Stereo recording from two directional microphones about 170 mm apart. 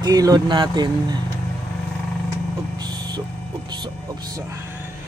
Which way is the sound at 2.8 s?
25° right (ahead or behind).